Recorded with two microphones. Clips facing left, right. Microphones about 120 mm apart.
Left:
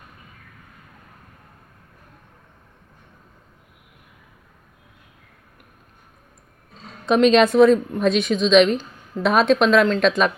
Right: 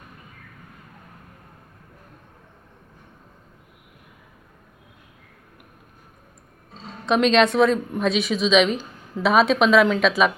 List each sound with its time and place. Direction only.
7.0 s a woman's voice: centre (ahead or behind)